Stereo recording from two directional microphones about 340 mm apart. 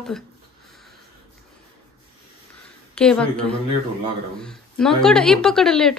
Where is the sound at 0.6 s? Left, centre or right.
Centre.